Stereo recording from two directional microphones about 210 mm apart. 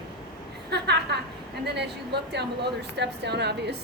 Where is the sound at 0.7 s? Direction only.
50° right (ahead or behind).